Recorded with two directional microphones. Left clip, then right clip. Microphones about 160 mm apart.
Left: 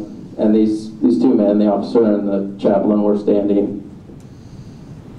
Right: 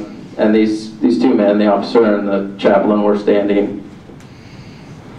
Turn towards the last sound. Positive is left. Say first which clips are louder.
# right 2 dB
turn(degrees=-25)  # may be behind; listen again after turning